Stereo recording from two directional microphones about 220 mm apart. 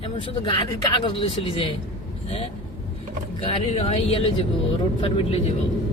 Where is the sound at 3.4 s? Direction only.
25° left (ahead or behind).